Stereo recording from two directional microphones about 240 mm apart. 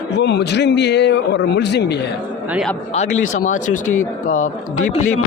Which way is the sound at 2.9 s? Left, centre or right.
Left.